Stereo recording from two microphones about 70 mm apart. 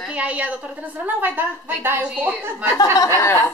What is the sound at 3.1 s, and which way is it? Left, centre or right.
Speech, left.